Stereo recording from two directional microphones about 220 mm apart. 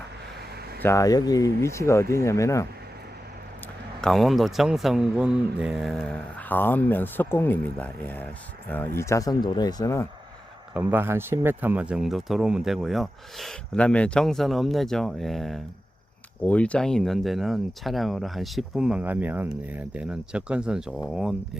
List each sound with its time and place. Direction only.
0.3 s vehicle: 45° right (ahead or behind)
0.8 s speech: 15° left (ahead or behind)
4.0 s speech: centre (ahead or behind)
10.8 s speech: 10° right (ahead or behind)